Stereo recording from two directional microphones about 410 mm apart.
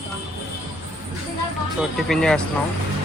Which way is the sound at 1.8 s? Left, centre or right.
Centre.